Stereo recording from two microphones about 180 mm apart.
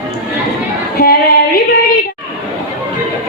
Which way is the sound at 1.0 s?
55° left (ahead or behind).